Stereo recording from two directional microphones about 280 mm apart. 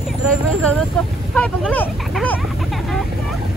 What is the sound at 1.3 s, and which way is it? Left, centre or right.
Speech, centre.